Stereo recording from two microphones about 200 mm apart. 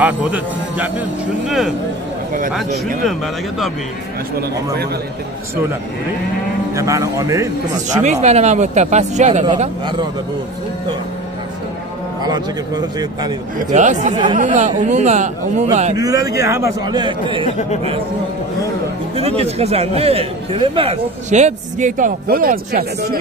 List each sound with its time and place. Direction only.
0.0 s a man's voice: 10° right (ahead or behind)
3.1 s speech: centre (ahead or behind)
6.7 s a man's voice: 15° right (ahead or behind)
8.0 s a man's voice: 35° right (ahead or behind)
9.5 s speech: 25° right (ahead or behind)
12.2 s speech: 20° right (ahead or behind)
13.7 s a man's voice: 35° right (ahead or behind)
14.1 s speech: 25° right (ahead or behind)
14.5 s a man's voice: 35° right (ahead or behind)
16.0 s a man's voice: 15° right (ahead or behind)
17.5 s speech: 35° left (ahead or behind)
19.1 s a man's voice: 30° right (ahead or behind); by 22.8 s 45° right (ahead or behind)